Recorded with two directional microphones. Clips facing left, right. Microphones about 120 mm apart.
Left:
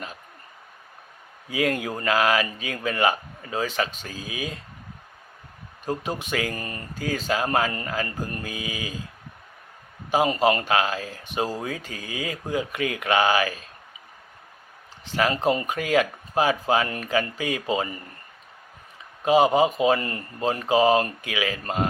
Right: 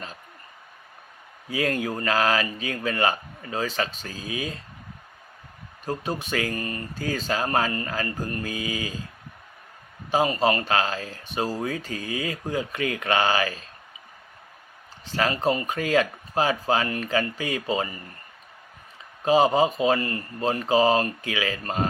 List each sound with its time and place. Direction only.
1.5 s speech: 15° left (ahead or behind)
5.8 s speech: 15° left (ahead or behind)
7.0 s speech: 15° left (ahead or behind)
10.1 s speech: 15° left (ahead or behind)
15.1 s speech: 15° left (ahead or behind)
19.2 s speech: 15° left (ahead or behind)
20.0 s speech: 25° left (ahead or behind)